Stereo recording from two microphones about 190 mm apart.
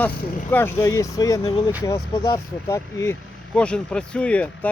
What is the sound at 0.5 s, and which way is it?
Speech, 10° left (ahead or behind).